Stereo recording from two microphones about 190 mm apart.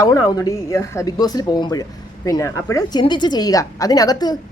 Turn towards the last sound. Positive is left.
turn(degrees=20)  # may be behind; listen again after turning